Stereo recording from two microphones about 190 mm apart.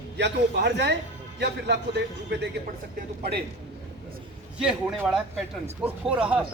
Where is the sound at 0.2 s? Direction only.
65° right (ahead or behind).